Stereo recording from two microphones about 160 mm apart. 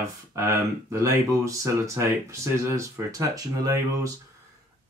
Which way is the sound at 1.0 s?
20° right (ahead or behind).